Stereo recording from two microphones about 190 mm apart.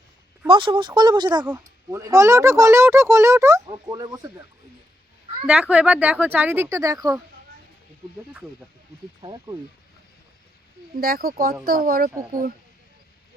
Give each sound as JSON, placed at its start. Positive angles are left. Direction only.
{"t": 0.4, "sound": "speech", "side_deg": -25}
{"t": 5.5, "sound": "speech", "side_deg": -5}
{"t": 10.9, "sound": "speech", "side_deg": -50}